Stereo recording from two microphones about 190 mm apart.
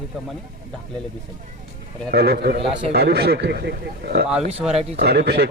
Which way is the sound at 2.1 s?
60° right (ahead or behind).